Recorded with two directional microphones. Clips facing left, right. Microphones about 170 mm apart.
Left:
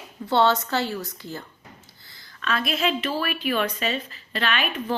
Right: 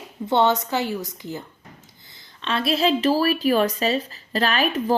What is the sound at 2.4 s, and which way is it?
Speech, 30° right (ahead or behind).